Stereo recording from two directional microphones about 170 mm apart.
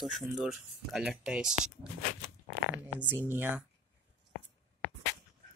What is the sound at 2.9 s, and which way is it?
Speech, 10° right (ahead or behind).